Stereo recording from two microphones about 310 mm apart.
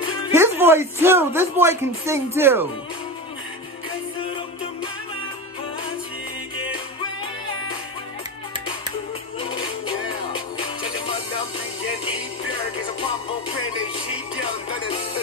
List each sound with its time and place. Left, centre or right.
0.3 s speech: centre
9.5 s music: centre
13.0 s music: centre